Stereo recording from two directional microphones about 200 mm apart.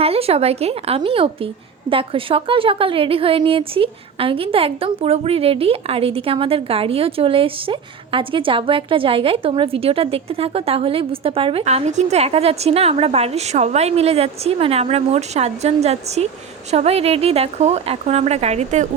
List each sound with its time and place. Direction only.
0.0 s a woman's voice: 30° right (ahead or behind)